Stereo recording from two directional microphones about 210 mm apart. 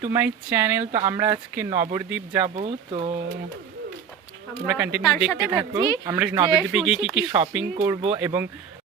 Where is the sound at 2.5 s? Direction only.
30° right (ahead or behind).